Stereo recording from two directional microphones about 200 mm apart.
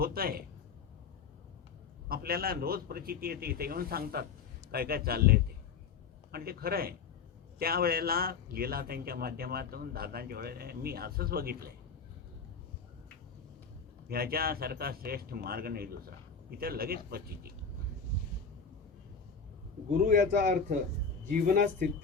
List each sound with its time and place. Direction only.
0.0 s a man's voice: 50° right (ahead or behind)
2.0 s a man's voice: 50° right (ahead or behind)
14.1 s a man's voice: 50° right (ahead or behind)
20.1 s a man's voice: 40° right (ahead or behind)